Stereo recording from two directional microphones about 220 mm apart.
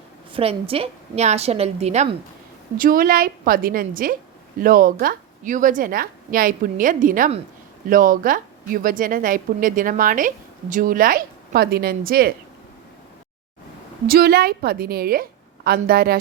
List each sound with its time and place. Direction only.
0.3 s a woman's voice: 25° right (ahead or behind)
2.7 s a woman's voice: 40° right (ahead or behind)
14.1 s a woman's voice: 45° right (ahead or behind)